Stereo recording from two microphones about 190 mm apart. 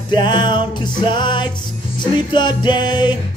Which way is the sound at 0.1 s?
25° left (ahead or behind).